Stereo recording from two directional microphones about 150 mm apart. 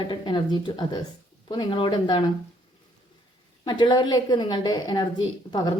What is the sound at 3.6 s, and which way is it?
A woman's voice, 25° left (ahead or behind).